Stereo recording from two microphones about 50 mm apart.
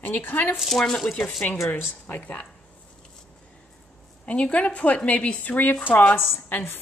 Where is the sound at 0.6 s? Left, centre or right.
Centre.